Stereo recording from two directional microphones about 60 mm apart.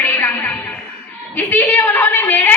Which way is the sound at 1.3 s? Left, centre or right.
Left.